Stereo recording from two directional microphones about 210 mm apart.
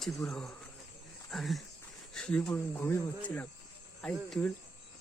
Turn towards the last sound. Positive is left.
turn(degrees=5)  # may be behind; listen again after turning